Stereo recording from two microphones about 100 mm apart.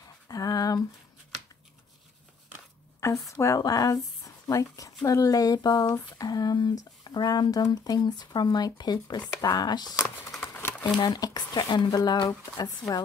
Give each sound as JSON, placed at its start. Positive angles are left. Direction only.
{"t": 0.3, "sound": "a sound", "side_deg": 40}
{"t": 3.0, "sound": "speech", "side_deg": 30}
{"t": 11.0, "sound": "speech", "side_deg": 40}